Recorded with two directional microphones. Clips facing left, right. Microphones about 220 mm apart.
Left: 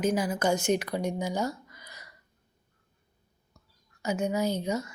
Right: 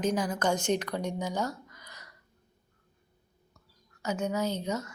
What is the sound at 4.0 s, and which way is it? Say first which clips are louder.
Speech: left 2 dB; 10° left (ahead or behind).